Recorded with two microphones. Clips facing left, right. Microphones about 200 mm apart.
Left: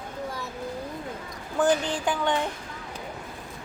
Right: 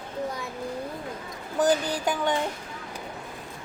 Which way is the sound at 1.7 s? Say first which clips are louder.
Even; 5° right (ahead or behind).